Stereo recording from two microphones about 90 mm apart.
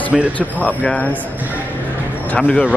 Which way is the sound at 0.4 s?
15° left (ahead or behind).